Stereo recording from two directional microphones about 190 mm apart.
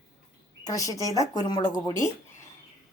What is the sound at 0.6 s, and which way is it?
Speech, 15° left (ahead or behind).